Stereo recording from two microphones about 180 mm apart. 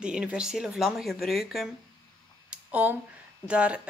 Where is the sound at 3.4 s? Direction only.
5° right (ahead or behind).